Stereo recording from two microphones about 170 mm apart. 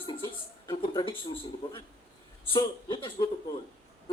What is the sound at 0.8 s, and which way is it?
Speech, 30° left (ahead or behind).